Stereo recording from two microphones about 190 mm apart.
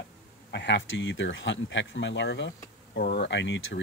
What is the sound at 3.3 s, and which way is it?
Speech, 70° left (ahead or behind).